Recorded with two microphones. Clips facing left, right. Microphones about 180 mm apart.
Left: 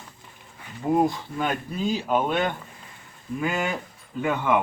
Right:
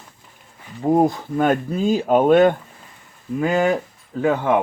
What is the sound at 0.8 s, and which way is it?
Speech, 40° right (ahead or behind).